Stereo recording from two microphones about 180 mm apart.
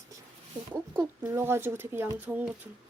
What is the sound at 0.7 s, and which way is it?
Speech, 10° right (ahead or behind).